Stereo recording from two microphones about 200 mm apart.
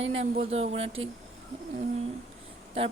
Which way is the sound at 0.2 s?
30° right (ahead or behind).